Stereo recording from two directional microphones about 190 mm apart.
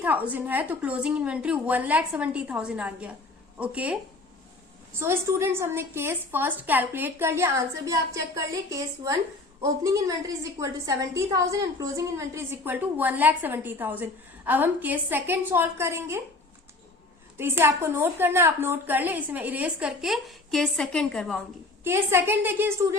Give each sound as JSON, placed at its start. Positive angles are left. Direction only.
{"t": 0.0, "sound": "a woman's voice", "side_deg": -10}
{"t": 4.9, "sound": "a woman's voice", "side_deg": -15}
{"t": 17.3, "sound": "a woman's voice", "side_deg": -10}
{"t": 21.8, "sound": "a woman's voice", "side_deg": -15}